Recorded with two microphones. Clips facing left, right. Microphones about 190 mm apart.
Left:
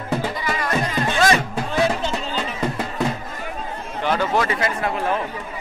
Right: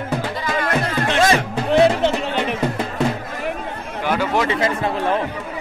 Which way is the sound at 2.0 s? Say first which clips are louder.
Right 6 dB; 70° right (ahead or behind).